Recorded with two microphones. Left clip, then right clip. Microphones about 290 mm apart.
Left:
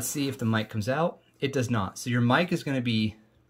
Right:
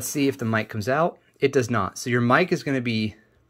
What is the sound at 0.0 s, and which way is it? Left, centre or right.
Speech, centre.